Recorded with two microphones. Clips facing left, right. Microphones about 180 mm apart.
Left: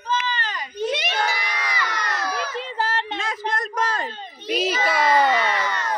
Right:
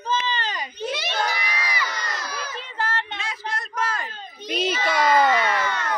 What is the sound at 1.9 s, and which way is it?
Crowd, 65° left (ahead or behind).